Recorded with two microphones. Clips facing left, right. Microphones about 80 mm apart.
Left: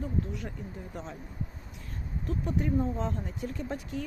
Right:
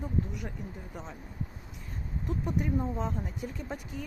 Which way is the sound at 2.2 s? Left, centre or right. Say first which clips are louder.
Left 1 dB; centre.